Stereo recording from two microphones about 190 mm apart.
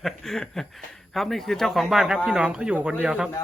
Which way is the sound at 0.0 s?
Centre (ahead or behind).